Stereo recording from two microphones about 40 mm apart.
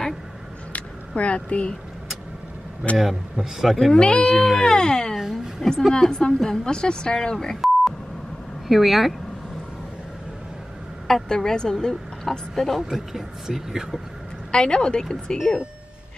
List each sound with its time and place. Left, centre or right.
0.7 s speech: left
3.0 s speech: centre
3.9 s a woman's voice: left
5.1 s a woman's voice: centre
5.7 s a woman's voice: centre
7.6 s beep: centre
8.6 s speech: centre
11.2 s speech: centre
12.7 s speech: centre
14.5 s a woman's voice: left